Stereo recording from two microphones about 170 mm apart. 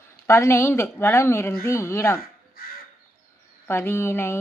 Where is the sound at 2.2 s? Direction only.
60° left (ahead or behind).